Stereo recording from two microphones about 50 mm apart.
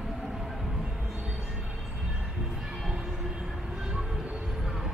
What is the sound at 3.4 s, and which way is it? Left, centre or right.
Train, centre.